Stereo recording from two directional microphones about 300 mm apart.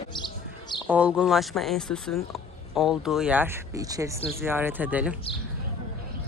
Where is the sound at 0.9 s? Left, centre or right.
Centre.